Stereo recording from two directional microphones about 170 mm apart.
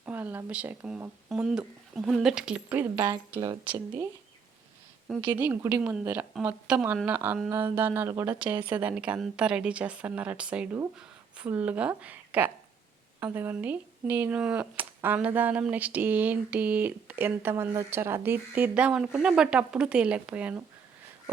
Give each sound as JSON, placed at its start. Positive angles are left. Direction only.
{"t": 0.0, "sound": "a woman's voice", "side_deg": -10}
{"t": 3.4, "sound": "speech", "side_deg": -25}
{"t": 5.2, "sound": "a woman's voice", "side_deg": -10}